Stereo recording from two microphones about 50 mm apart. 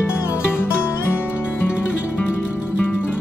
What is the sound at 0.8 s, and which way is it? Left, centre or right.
Music, left.